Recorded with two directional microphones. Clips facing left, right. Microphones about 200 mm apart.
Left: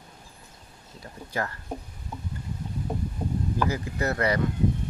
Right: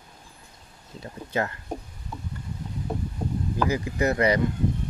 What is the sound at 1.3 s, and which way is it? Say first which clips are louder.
Speech: right 4 dB; 20° right (ahead or behind).